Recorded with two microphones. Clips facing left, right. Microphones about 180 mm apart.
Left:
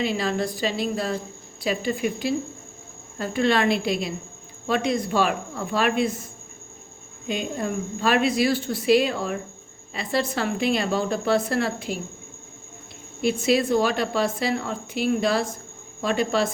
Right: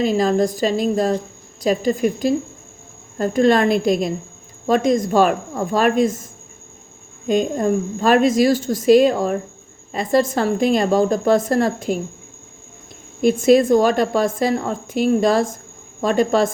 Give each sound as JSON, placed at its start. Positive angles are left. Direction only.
{"t": 0.0, "sound": "a woman's voice", "side_deg": -45}
{"t": 7.3, "sound": "a woman's voice", "side_deg": -45}
{"t": 13.2, "sound": "a woman's voice", "side_deg": -50}